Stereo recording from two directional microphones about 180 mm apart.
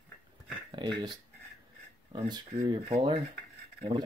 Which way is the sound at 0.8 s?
25° right (ahead or behind).